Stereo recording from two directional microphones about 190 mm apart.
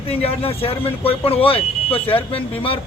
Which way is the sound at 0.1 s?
30° left (ahead or behind).